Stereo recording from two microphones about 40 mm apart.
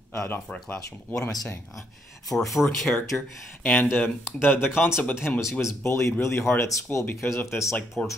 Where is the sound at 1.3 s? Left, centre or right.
Centre.